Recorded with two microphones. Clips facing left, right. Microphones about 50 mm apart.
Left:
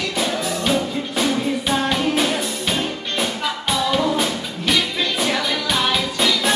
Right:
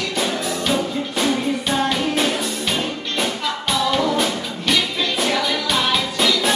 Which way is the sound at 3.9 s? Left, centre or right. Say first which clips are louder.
Even; centre.